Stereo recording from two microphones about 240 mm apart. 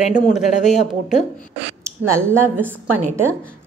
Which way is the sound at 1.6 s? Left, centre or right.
Right.